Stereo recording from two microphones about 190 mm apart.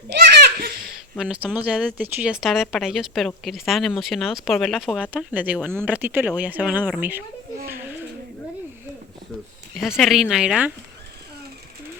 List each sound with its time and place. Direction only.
0.1 s a sound: 60° right (ahead or behind)
1.2 s a woman's voice: 5° right (ahead or behind)
9.7 s a woman's voice: centre (ahead or behind)